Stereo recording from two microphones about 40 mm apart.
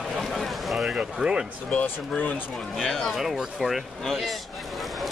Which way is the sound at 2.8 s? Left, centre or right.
Centre.